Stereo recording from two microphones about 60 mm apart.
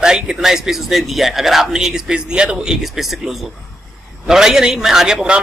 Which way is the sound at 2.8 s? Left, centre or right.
Centre.